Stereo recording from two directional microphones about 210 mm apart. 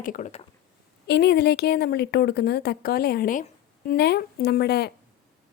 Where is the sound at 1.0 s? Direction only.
50° left (ahead or behind).